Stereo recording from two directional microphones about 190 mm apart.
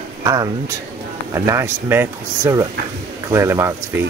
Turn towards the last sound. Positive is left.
turn(degrees=-15)  # may be behind; listen again after turning